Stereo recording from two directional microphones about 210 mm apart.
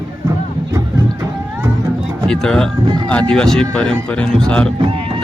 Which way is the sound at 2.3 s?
5° left (ahead or behind).